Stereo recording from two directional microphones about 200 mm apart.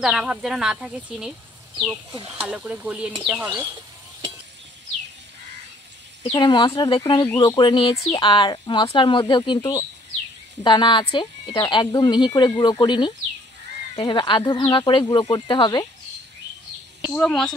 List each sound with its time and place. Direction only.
0.0 s speech: 5° right (ahead or behind)
2.1 s speech: 30° right (ahead or behind)
2.4 s speech: 5° right (ahead or behind)
6.2 s speech: 20° left (ahead or behind)
17.0 s speech: 5° left (ahead or behind)